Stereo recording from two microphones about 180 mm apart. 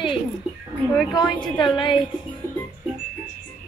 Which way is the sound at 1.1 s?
20° left (ahead or behind).